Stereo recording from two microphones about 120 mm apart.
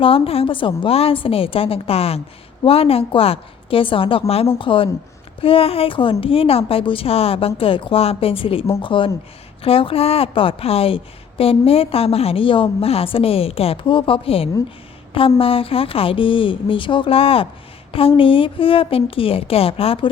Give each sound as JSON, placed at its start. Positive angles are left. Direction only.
{"t": 0.0, "sound": "a woman's voice", "side_deg": 50}